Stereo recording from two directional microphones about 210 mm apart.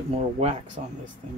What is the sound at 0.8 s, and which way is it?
Speech, 35° right (ahead or behind).